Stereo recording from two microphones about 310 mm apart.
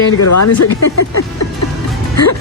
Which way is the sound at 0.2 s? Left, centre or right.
Left.